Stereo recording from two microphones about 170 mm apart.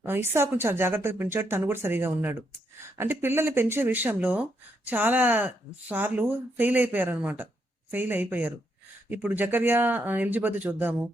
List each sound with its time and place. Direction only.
0.0 s speech: 15° right (ahead or behind)